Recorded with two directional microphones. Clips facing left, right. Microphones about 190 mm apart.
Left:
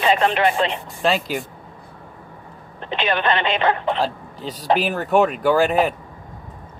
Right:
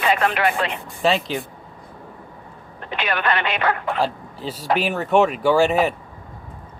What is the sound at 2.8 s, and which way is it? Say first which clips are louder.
Speech: left 3 dB; 25° left (ahead or behind).